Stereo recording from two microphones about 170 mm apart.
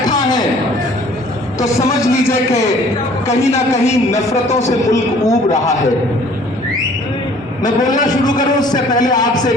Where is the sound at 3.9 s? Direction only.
20° left (ahead or behind).